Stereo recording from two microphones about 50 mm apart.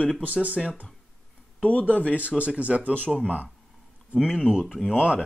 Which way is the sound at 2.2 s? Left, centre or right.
Right.